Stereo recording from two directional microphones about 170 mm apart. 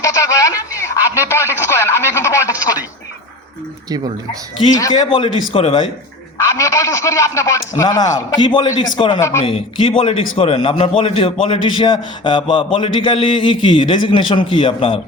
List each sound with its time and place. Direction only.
0.0 s radio: 20° left (ahead or behind)
3.8 s speech: 25° right (ahead or behind)
4.8 s a man's voice: 25° left (ahead or behind)
6.3 s a man's voice: 20° left (ahead or behind)